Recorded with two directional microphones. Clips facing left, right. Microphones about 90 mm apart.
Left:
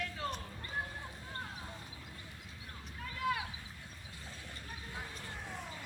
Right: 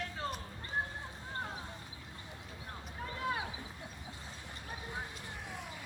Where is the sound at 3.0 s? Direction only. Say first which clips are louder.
Left 1 dB; 30° right (ahead or behind).